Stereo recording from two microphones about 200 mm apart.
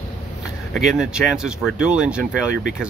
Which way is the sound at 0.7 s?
Centre (ahead or behind).